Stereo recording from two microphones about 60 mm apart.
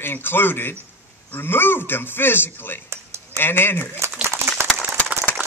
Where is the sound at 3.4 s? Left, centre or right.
Left.